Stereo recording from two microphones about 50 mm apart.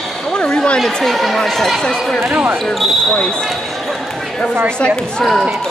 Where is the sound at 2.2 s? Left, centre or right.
Right.